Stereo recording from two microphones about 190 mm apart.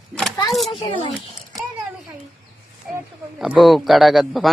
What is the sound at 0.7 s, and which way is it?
Speech, 25° left (ahead or behind).